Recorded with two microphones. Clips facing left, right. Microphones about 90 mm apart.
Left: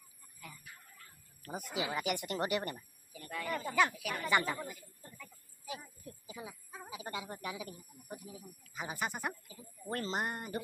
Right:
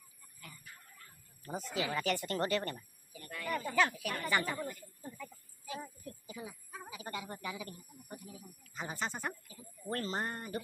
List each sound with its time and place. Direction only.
0.7 s chicken: 5° left (ahead or behind)
1.5 s speech: 15° left (ahead or behind)
6.3 s a sound: 25° left (ahead or behind)
7.0 s speech: 15° left (ahead or behind)